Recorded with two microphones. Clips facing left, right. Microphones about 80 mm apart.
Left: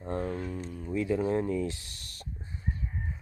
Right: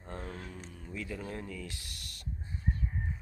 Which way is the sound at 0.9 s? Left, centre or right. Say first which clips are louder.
Left 12 dB; left.